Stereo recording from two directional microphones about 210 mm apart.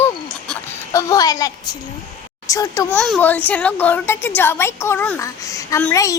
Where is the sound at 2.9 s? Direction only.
Centre (ahead or behind).